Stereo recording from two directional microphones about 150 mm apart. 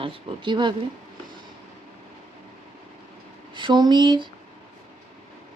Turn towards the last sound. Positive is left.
turn(degrees=-30)  # may be behind; listen again after turning